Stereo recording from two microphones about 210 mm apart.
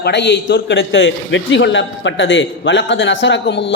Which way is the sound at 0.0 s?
55° left (ahead or behind).